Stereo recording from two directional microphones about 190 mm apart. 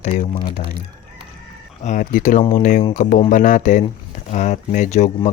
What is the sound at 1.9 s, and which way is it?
Speech, 40° left (ahead or behind).